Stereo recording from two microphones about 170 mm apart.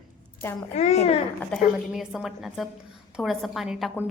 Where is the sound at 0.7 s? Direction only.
40° left (ahead or behind).